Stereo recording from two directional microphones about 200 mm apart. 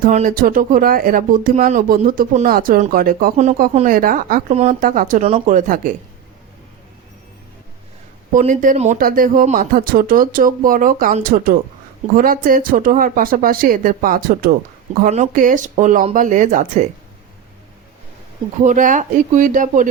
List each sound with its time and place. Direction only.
0.0 s speech: 40° right (ahead or behind)
8.3 s speech: 40° right (ahead or behind)
18.6 s speech: 40° right (ahead or behind)